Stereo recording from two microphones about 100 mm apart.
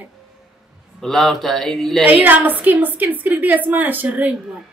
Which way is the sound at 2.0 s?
15° right (ahead or behind).